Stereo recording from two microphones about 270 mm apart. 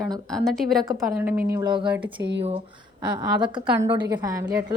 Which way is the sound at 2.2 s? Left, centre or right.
Right.